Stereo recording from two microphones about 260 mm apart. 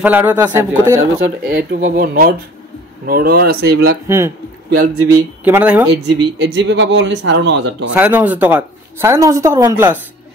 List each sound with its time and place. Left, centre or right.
0.0 s a woman's voice: centre
1.2 s speech: right
4.1 s a woman's voice: centre
4.6 s a man's voice: right
5.4 s a woman's voice: centre
6.0 s speech: right
7.9 s a woman's voice: centre